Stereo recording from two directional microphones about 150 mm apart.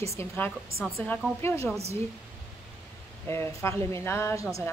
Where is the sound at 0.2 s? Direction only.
15° left (ahead or behind).